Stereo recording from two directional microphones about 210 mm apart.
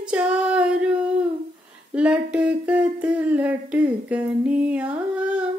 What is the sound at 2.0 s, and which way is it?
Humming, 5° right (ahead or behind).